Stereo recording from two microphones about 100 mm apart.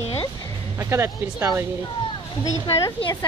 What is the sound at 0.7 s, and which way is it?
Speech, 25° right (ahead or behind).